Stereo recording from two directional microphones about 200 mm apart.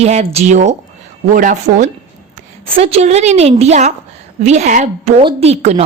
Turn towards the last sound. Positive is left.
turn(degrees=-30)  # may be behind; listen again after turning